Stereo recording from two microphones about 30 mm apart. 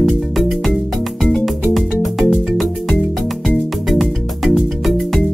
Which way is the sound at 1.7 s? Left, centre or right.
Centre.